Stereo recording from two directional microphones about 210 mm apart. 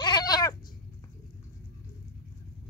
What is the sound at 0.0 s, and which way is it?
Cat, 20° left (ahead or behind).